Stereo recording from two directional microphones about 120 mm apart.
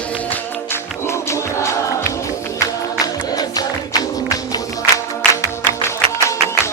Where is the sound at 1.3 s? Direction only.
25° left (ahead or behind).